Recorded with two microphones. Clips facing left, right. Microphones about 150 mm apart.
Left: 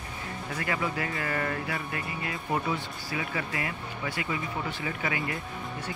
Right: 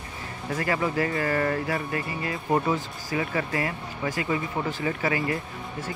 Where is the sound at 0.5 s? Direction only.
40° right (ahead or behind).